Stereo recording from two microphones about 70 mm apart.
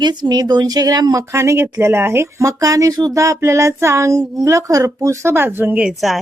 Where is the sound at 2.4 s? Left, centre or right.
Right.